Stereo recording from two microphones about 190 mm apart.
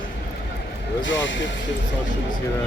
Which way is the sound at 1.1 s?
75° left (ahead or behind).